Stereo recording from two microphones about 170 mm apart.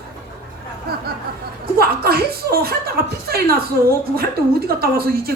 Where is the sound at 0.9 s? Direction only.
65° right (ahead or behind).